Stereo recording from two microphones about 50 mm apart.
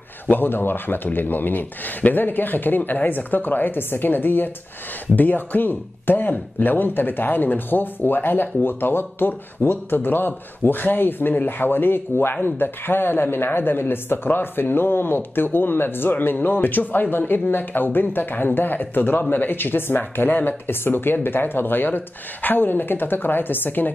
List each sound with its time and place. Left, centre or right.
0.3 s speech: left